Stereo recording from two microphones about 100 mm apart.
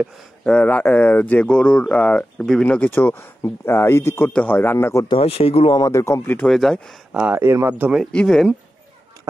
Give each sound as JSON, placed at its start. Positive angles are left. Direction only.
{"t": 0.5, "sound": "speech", "side_deg": 15}
{"t": 2.9, "sound": "speech", "side_deg": 20}
{"t": 5.0, "sound": "speech", "side_deg": 70}
{"t": 5.9, "sound": "speech", "side_deg": 30}
{"t": 6.4, "sound": "speech", "side_deg": 5}
{"t": 7.1, "sound": "speech", "side_deg": -15}
{"t": 8.0, "sound": "speech", "side_deg": 10}